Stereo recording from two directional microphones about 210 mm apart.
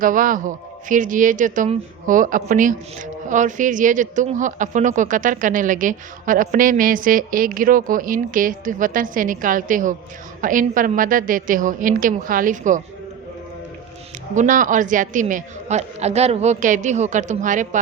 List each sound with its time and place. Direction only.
0.0 s speech: 40° right (ahead or behind)
14.3 s speech: 40° right (ahead or behind)